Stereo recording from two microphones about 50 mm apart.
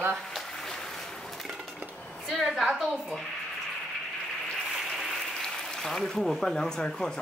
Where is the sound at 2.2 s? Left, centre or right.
Centre.